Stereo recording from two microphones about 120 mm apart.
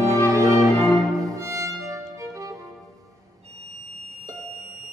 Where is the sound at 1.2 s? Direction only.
30° right (ahead or behind).